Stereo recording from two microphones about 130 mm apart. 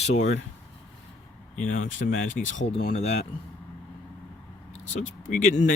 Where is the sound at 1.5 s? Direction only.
75° left (ahead or behind).